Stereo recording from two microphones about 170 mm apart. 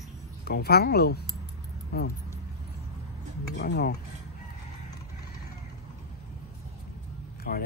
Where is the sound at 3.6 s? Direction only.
80° left.